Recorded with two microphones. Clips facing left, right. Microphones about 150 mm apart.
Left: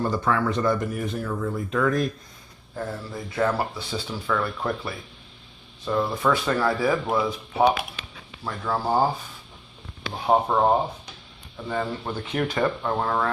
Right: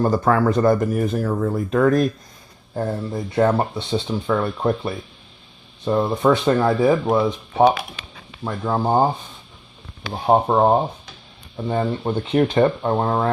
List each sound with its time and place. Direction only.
0.0 s speech: 45° right (ahead or behind)
2.7 s speech: 30° right (ahead or behind)
8.4 s speech: 20° right (ahead or behind)